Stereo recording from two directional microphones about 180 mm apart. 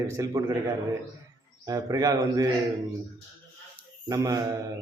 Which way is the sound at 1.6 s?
20° right (ahead or behind).